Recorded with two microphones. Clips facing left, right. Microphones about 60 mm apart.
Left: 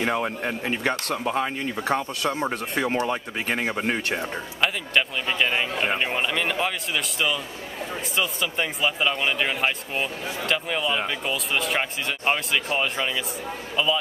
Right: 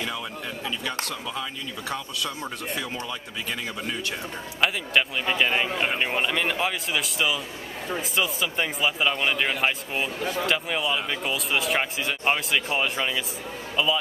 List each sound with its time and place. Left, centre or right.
0.0 s speech: left
4.6 s speech: centre